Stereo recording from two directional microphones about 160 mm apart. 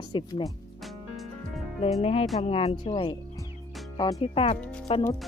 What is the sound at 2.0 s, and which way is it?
Speech, 40° left (ahead or behind).